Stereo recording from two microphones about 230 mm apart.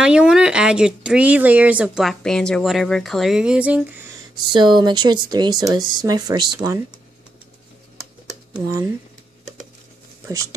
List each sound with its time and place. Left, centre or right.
0.0 s speech: centre
4.5 s speech: centre
8.5 s speech: centre